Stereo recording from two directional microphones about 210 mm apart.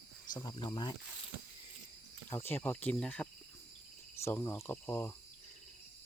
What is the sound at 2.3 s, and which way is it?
Speech, 10° left (ahead or behind).